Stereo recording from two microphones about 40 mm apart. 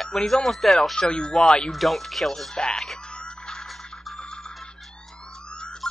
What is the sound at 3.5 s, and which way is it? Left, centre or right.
Music, centre.